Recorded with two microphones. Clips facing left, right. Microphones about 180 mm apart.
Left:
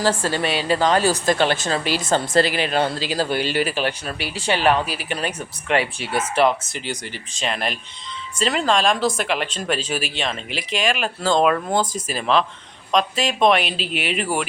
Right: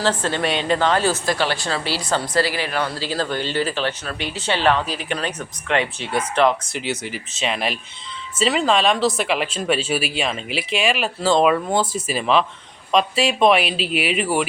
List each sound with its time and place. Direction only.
0.0 s a woman's voice: 10° left (ahead or behind)
3.1 s speech: 10° left (ahead or behind)